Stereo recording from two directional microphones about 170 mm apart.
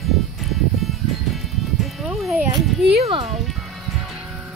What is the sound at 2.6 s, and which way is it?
Speech, centre (ahead or behind).